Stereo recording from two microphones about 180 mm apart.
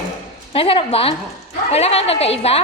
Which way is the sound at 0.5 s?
30° left (ahead or behind).